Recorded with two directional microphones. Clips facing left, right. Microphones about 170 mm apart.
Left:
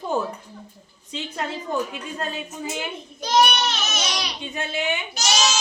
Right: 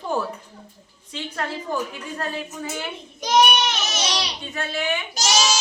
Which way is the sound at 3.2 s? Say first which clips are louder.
Right 1 dB; 15° right (ahead or behind).